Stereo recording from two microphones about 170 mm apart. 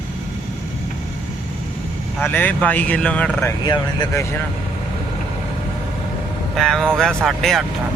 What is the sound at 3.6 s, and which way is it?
Speech, 25° left (ahead or behind).